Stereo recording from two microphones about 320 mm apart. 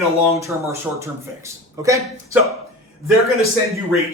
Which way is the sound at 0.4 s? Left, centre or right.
Centre.